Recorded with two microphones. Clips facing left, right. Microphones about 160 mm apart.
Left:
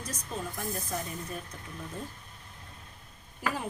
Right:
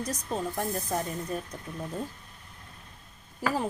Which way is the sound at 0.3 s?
40° right (ahead or behind).